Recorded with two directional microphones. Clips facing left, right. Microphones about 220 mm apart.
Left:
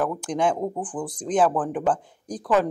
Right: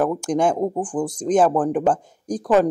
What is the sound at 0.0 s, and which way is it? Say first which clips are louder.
Speech: right 4 dB; 45° right (ahead or behind).